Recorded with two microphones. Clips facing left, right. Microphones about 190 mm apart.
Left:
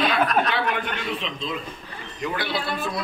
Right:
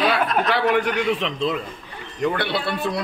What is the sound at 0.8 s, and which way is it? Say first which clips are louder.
A man's voice: right 7 dB; 75° right (ahead or behind).